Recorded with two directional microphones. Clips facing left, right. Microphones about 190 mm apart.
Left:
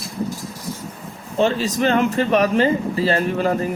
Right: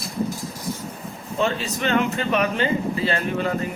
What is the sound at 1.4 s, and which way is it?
Speech, 35° left (ahead or behind).